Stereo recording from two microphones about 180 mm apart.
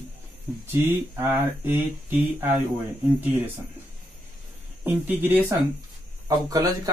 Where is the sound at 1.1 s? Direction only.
10° right (ahead or behind).